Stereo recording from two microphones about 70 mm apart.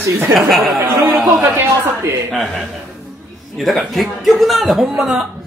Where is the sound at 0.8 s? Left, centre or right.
Centre.